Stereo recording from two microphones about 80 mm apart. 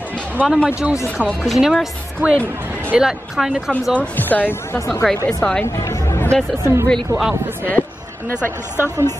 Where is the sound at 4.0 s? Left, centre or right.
Left.